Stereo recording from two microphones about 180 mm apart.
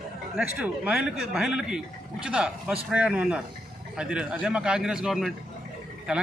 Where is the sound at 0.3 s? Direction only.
5° right (ahead or behind).